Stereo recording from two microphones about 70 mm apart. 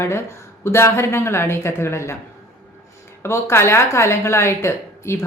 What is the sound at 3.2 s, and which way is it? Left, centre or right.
Speech, left.